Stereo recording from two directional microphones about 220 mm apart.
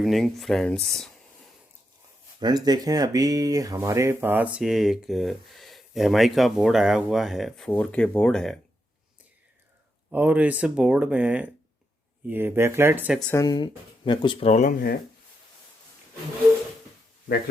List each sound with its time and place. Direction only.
0.0 s speech: centre (ahead or behind)
2.4 s speech: 20° right (ahead or behind); by 8.5 s 5° left (ahead or behind)
10.1 s speech: 5° right (ahead or behind)
13.3 s speech: 15° left (ahead or behind); by 14.9 s 40° left (ahead or behind)